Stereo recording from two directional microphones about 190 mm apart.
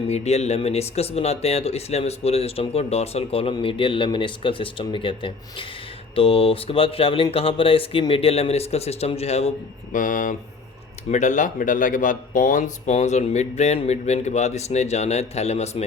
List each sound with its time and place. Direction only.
0.1 s speech: 35° left (ahead or behind)
9.9 s speech: 45° left (ahead or behind)